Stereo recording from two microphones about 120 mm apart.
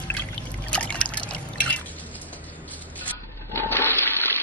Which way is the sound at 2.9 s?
15° left (ahead or behind).